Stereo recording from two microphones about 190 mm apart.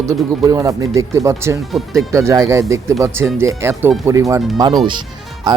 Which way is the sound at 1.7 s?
Centre (ahead or behind).